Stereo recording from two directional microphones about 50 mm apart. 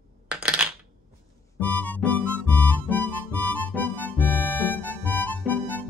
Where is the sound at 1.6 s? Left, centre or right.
Left.